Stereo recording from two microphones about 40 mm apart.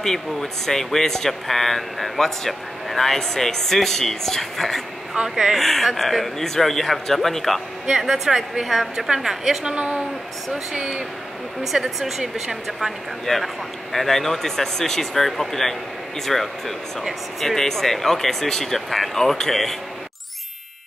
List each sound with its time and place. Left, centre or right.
0.0 s speech: centre
5.3 s speech: centre
5.6 s speech: centre
8.0 s a woman's voice: centre
9.8 s speech: right
11.6 s a woman's voice: centre
13.2 s speech: centre